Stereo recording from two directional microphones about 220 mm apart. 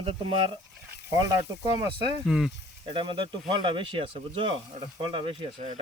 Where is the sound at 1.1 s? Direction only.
15° right (ahead or behind).